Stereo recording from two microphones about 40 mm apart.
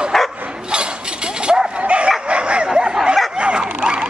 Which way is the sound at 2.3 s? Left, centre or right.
Right.